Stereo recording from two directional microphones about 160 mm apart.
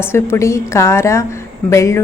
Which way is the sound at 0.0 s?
15° left (ahead or behind).